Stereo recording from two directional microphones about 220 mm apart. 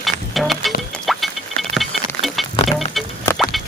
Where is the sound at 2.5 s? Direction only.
30° left (ahead or behind).